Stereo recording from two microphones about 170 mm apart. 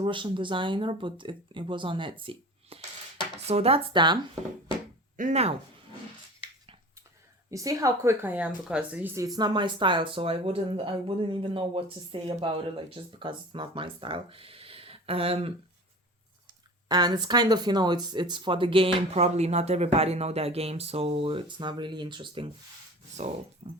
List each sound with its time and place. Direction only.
0.0 s a woman's voice: 30° right (ahead or behind)
5.1 s speech: 45° right (ahead or behind)
7.5 s a woman's voice: 20° right (ahead or behind); by 15.5 s 35° right (ahead or behind)
16.9 s speech: 25° right (ahead or behind)
23.6 s speech: 40° right (ahead or behind)